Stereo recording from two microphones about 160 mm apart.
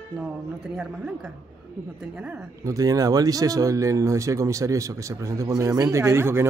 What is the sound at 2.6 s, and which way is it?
Speech, 20° right (ahead or behind).